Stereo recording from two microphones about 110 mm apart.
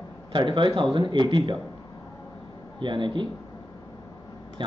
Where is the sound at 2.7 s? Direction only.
45° right (ahead or behind).